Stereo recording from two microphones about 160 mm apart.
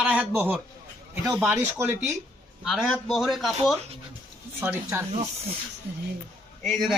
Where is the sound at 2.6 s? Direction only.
Centre (ahead or behind).